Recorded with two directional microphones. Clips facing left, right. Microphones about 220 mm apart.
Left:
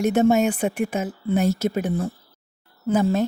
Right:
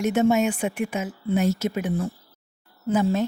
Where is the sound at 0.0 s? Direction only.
35° left (ahead or behind).